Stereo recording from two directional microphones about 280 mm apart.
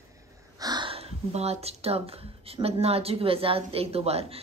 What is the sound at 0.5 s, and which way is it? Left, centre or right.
A woman's voice, centre.